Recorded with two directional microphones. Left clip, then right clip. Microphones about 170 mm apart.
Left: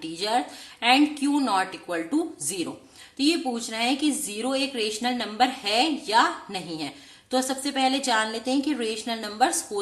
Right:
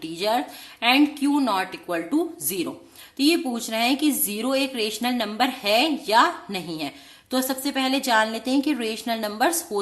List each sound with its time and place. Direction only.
0.0 s speech: 25° right (ahead or behind)